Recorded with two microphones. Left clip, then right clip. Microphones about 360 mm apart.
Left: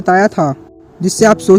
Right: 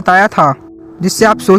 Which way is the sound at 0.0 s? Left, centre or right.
Centre.